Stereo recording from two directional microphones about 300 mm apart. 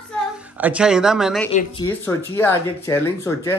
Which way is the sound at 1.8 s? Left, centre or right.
Centre.